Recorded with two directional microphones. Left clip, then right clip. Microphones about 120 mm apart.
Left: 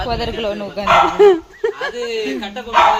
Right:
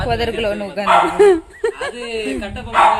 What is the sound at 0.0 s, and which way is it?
Speech, 30° right (ahead or behind).